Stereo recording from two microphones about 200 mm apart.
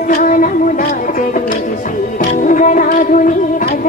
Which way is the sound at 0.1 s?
40° left (ahead or behind).